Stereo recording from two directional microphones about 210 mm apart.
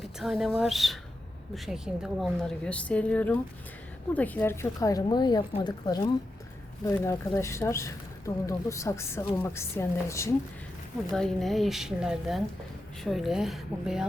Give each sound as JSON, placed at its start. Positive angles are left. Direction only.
{"t": 0.2, "sound": "a woman's voice", "side_deg": 0}
{"t": 11.1, "sound": "a woman's voice", "side_deg": 0}